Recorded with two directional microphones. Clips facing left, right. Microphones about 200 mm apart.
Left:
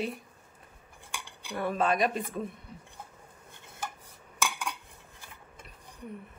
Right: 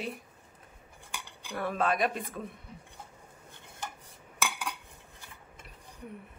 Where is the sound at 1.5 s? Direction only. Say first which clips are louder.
Left 2 dB; centre (ahead or behind).